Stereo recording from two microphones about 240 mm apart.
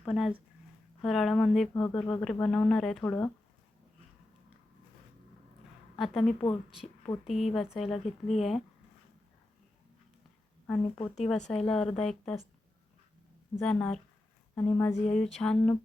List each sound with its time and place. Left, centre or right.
0.0 s speech: centre
6.0 s speech: centre
10.9 s speech: left
11.2 s speech: centre
13.6 s speech: centre